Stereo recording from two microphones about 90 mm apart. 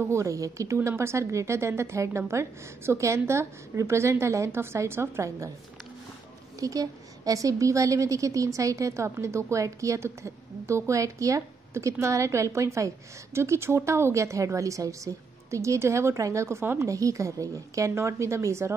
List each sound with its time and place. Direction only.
0.0 s a woman's voice: 35° right (ahead or behind)
6.6 s a woman's voice: 40° right (ahead or behind)